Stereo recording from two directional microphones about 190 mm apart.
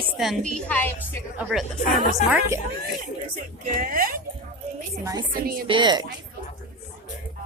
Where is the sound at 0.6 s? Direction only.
10° left (ahead or behind).